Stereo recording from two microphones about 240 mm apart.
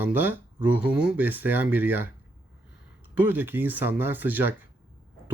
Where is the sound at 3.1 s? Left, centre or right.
Centre.